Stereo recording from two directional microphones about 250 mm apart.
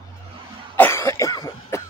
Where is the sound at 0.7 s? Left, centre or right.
Centre.